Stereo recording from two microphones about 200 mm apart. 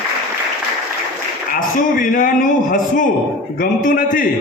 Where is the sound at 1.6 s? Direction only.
45° left (ahead or behind).